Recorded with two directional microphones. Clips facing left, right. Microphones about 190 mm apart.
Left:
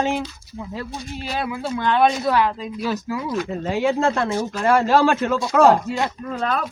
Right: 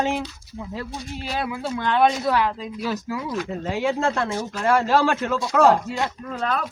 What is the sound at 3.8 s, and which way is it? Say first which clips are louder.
Speech: left 3 dB; 25° left (ahead or behind).